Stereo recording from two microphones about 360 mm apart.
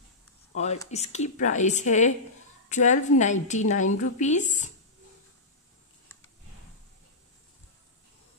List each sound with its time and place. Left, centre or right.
0.6 s a woman's voice: centre